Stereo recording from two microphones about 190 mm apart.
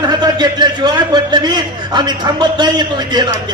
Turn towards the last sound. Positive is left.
turn(degrees=-20)  # may be behind; listen again after turning